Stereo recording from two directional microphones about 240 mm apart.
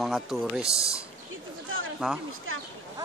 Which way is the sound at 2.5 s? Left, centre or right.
Right.